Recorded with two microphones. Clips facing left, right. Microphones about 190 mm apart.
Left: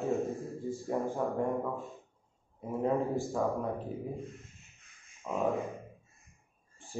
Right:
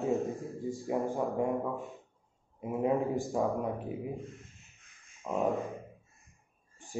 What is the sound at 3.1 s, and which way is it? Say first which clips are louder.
Speech: right 1 dB; 15° right (ahead or behind).